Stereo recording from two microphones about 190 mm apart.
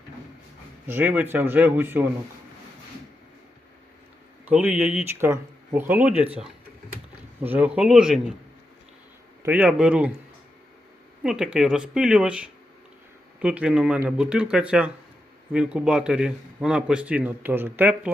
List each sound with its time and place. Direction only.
0.9 s speech: 10° right (ahead or behind)
4.4 s a man's voice: 5° right (ahead or behind)
9.4 s speech: 10° right (ahead or behind)
11.2 s a man's voice: 5° right (ahead or behind)